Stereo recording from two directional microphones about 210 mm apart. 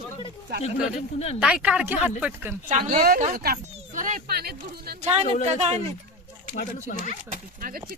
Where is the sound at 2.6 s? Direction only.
35° right (ahead or behind).